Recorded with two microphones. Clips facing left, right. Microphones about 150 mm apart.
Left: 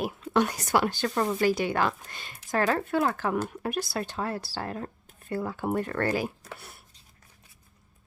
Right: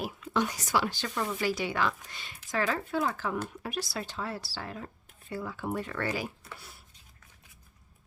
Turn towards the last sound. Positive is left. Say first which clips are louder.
# left 4 dB
turn(degrees=60)  # may be behind; listen again after turning